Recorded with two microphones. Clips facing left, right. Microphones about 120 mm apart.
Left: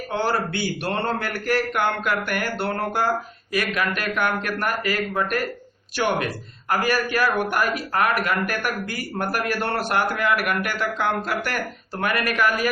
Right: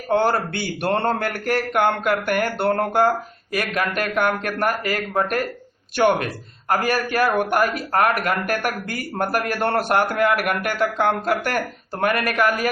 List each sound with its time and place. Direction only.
0.1 s speech: 55° right (ahead or behind)